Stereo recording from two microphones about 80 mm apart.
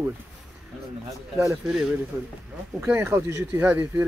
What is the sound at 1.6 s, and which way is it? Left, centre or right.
Speech, centre.